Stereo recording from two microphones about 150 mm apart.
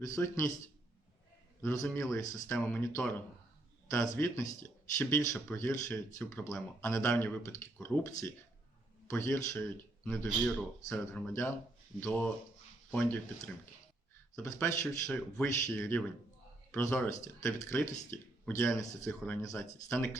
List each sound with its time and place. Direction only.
0.2 s speech: 15° left (ahead or behind)
1.6 s a man's voice: 20° left (ahead or behind)